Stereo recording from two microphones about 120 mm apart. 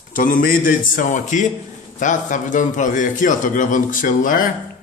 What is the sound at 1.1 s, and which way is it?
A man's voice, 90° left.